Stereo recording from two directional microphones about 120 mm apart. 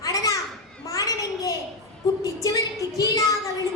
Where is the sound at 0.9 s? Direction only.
30° left (ahead or behind).